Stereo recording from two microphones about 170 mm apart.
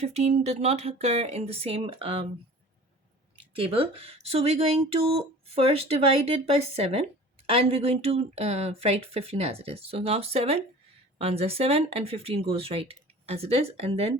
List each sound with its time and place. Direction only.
0.0 s speech: 40° right (ahead or behind)
3.5 s speech: 35° right (ahead or behind)